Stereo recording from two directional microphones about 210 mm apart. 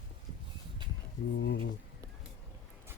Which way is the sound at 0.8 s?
20° right (ahead or behind).